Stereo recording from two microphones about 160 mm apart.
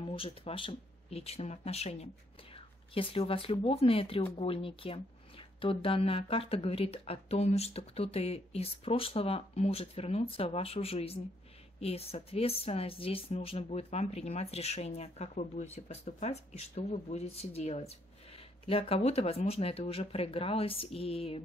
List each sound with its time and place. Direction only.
0.0 s speech: 35° left (ahead or behind)